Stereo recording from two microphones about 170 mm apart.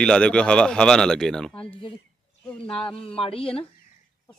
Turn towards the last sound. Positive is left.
turn(degrees=35)  # may be behind; listen again after turning